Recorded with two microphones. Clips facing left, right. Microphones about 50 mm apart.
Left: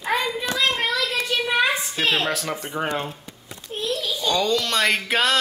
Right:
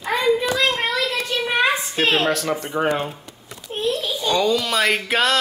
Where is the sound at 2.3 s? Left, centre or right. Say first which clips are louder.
Right 4 dB; centre.